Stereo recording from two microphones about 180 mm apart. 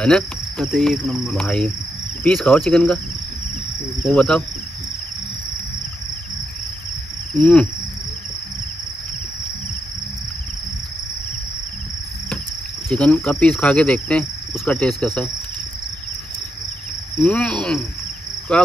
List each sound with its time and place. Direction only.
0.0 s cricket: 5° left (ahead or behind)
4.0 s cricket: 5° left (ahead or behind)
12.9 s insect: 5° left (ahead or behind)
17.2 s cricket: 5° left (ahead or behind)